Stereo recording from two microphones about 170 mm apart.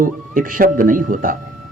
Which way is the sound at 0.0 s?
55° right (ahead or behind).